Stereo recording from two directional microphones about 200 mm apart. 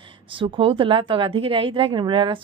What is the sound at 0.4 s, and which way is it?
A woman's voice, 25° right (ahead or behind).